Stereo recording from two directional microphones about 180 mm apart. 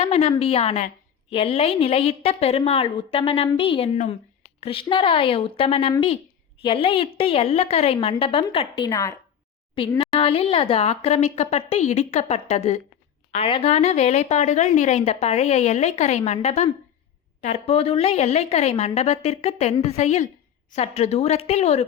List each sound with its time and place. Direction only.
0.0 s a woman's voice: 35° left (ahead or behind); by 9.1 s 20° left (ahead or behind)
10.0 s speech: 30° left (ahead or behind)